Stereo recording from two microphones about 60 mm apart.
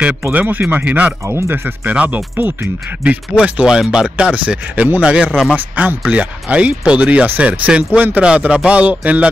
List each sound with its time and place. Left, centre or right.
0.3 s speech: right
3.0 s speech: right
5.0 s speech: centre